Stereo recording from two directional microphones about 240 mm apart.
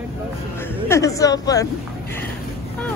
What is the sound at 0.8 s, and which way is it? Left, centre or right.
Speech, centre.